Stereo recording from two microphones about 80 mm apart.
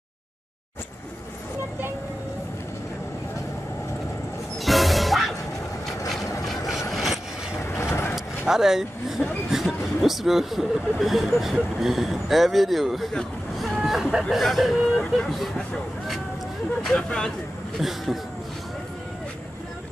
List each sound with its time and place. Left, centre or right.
4.6 s music: centre
6.0 s mechanisms: left
6.9 s vehicle: centre
7.5 s vehicle: left
8.5 s speech: centre
17.7 s speech: centre